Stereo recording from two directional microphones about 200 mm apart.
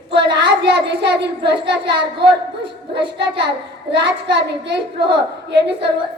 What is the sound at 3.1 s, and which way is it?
A child's voice, 55° right (ahead or behind).